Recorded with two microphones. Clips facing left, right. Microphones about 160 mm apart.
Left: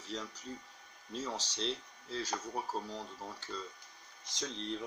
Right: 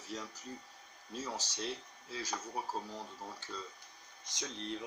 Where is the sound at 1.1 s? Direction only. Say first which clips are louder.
Left 2 dB; 10° right (ahead or behind).